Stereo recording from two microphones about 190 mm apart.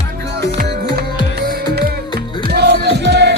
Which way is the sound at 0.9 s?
55° right (ahead or behind).